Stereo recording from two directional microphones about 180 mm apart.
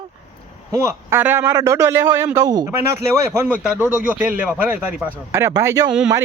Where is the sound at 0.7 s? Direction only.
15° right (ahead or behind).